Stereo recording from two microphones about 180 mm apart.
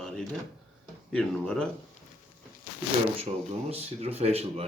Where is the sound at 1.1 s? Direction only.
5° left (ahead or behind).